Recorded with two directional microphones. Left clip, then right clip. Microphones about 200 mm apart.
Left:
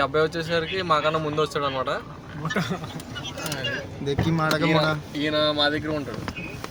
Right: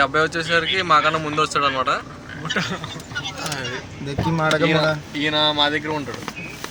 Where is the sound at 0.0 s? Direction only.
10° left (ahead or behind).